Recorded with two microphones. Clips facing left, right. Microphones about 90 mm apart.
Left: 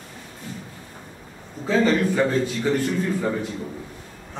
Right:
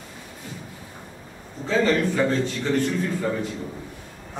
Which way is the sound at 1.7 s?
5° left (ahead or behind).